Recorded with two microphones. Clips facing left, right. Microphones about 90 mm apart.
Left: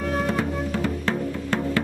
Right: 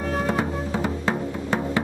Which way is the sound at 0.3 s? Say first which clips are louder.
Even; 25° right (ahead or behind).